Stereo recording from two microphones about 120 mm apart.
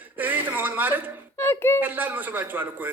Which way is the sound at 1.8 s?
15° right (ahead or behind).